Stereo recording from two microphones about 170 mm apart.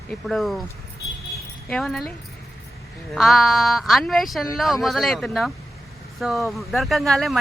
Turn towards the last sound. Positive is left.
turn(degrees=0)  # may be behind; listen again after turning